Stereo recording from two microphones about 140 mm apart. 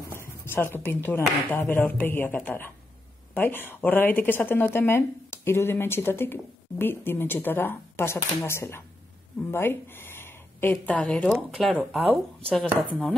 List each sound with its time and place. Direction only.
0.2 s speech: 15° left (ahead or behind)